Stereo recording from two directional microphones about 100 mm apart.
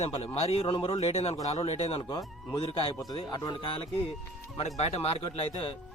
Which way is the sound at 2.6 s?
70° left (ahead or behind).